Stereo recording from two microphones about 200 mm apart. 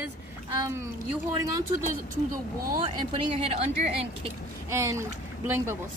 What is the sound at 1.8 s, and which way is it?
Speech, 45° right (ahead or behind).